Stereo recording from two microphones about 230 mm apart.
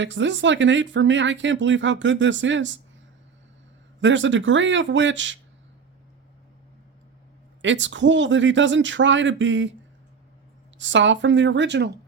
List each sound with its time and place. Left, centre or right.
0.0 s speech: right
4.0 s speech: right
7.6 s speech: right
10.8 s speech: right